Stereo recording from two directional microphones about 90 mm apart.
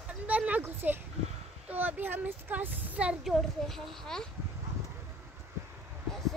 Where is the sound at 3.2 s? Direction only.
Centre (ahead or behind).